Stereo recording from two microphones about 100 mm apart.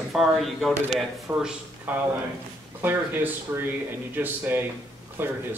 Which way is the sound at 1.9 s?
15° right (ahead or behind).